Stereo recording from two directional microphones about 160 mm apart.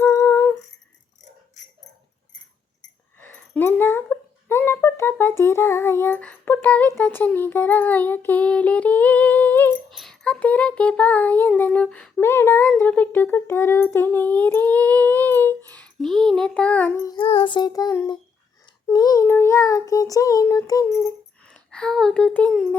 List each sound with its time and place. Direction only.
0.0 s humming: 15° left (ahead or behind)
3.2 s speech: 10° left (ahead or behind)
9.9 s a sound: centre (ahead or behind)
12.2 s a sound: 15° left (ahead or behind)
17.1 s child singing: 35° left (ahead or behind); by 21.5 s 15° left (ahead or behind)
21.5 s speech: 5° left (ahead or behind)